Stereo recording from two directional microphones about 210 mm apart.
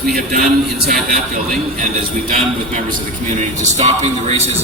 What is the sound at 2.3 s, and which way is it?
A man's voice, 35° right (ahead or behind).